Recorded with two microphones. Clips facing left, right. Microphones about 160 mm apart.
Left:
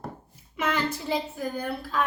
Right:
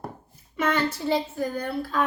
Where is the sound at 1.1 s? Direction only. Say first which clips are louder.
Right 3 dB; 5° left (ahead or behind).